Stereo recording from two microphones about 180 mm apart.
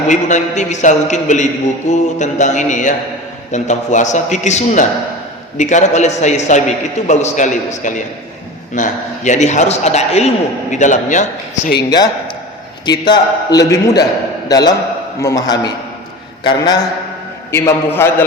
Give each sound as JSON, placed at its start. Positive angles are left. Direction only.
{"t": 0.1, "sound": "a man's voice", "side_deg": 40}
{"t": 1.9, "sound": "mantra", "side_deg": 40}
{"t": 3.5, "sound": "a man's voice", "side_deg": 40}
{"t": 11.8, "sound": "a man's voice", "side_deg": 20}
{"t": 17.5, "sound": "a man's voice", "side_deg": 15}